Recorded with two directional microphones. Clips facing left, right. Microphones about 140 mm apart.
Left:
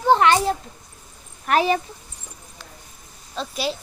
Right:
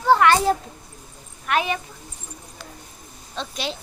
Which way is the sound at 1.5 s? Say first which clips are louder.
Left 4 dB; 35° left (ahead or behind).